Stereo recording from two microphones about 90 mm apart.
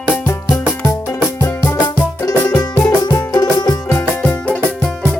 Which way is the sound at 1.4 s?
40° left (ahead or behind).